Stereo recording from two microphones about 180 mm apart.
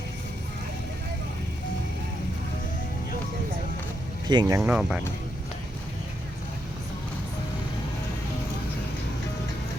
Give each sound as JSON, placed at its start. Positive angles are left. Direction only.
{"t": 4.3, "sound": "speech", "side_deg": -20}
{"t": 4.7, "sound": "speech", "side_deg": -5}